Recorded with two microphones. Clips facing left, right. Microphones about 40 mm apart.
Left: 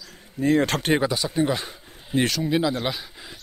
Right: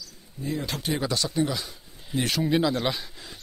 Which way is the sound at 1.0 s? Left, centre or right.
Centre.